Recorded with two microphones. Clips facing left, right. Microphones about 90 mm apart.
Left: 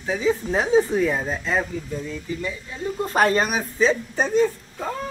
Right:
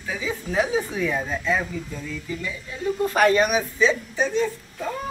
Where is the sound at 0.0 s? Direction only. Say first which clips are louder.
Left 7 dB; 30° left (ahead or behind).